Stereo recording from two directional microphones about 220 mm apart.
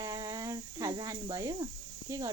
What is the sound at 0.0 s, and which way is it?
Cricket, 15° right (ahead or behind).